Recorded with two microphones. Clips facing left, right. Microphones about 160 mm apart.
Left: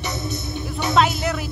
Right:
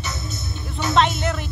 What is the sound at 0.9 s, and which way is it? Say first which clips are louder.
Music: even; 5° left (ahead or behind).